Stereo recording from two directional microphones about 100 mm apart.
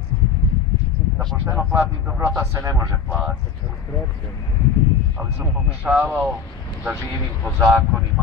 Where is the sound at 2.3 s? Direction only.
30° right (ahead or behind).